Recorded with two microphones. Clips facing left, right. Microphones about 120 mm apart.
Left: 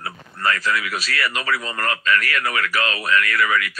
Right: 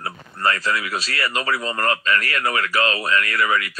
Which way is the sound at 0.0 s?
25° right (ahead or behind).